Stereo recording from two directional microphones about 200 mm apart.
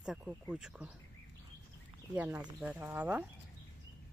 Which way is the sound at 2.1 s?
10° right (ahead or behind).